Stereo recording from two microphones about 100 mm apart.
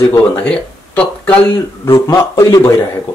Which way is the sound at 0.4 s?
10° left (ahead or behind).